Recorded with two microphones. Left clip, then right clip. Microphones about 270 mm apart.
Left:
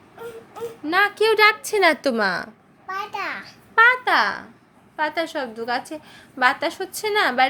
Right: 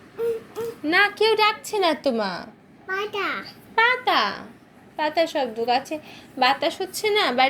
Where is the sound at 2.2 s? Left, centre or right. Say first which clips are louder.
Left 6 dB; left.